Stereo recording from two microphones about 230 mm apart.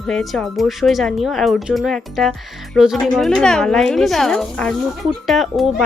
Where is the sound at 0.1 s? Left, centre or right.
Centre.